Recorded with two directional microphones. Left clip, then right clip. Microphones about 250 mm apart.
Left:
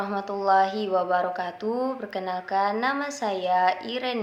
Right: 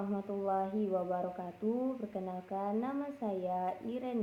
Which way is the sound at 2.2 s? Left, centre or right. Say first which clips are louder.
Left 13 dB; left.